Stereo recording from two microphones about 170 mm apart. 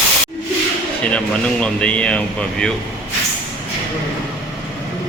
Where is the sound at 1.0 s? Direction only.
5° left (ahead or behind).